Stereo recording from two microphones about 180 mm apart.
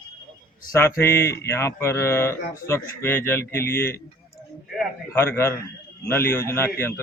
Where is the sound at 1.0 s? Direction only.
15° left (ahead or behind).